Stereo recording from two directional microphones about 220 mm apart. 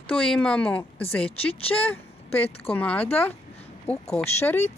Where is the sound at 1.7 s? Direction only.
5° left (ahead or behind).